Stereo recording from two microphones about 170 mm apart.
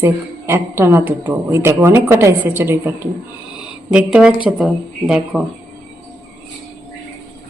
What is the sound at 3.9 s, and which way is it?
A woman's voice, 5° right (ahead or behind).